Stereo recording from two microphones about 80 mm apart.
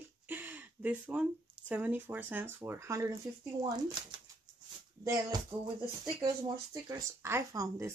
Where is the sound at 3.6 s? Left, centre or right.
Right.